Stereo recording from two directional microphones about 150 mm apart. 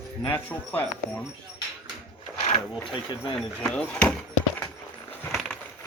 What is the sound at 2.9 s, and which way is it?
Speech, 30° left (ahead or behind).